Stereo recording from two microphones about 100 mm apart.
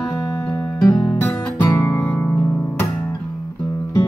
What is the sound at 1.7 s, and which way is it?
Guitar, 35° left (ahead or behind).